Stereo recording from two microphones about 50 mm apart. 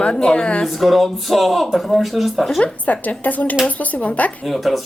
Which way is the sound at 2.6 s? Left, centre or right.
Left.